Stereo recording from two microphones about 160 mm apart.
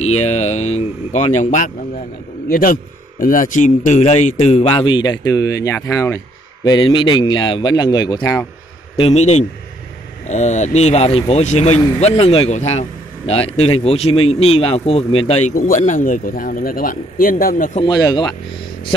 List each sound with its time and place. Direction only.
0.0 s speech: 40° left (ahead or behind)
2.5 s a man's voice: 60° left (ahead or behind); by 8.2 s 25° left (ahead or behind)
8.2 s speech: 10° left (ahead or behind)
8.9 s a man's voice: 40° left (ahead or behind)
15.5 s speech: 60° left (ahead or behind)
17.8 s speech: 25° left (ahead or behind)